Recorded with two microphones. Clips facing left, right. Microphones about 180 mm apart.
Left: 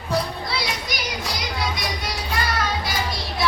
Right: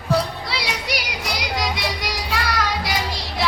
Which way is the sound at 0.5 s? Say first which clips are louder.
Right 4 dB; 75° right (ahead or behind).